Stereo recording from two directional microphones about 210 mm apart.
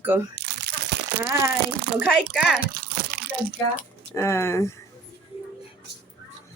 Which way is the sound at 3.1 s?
55° right (ahead or behind).